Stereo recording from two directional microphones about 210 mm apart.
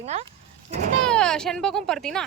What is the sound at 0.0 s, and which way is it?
Speech, 30° right (ahead or behind).